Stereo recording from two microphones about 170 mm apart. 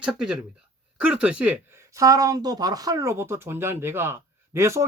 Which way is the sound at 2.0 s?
20° right (ahead or behind).